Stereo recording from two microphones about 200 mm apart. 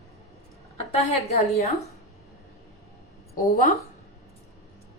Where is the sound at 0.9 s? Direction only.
30° left (ahead or behind).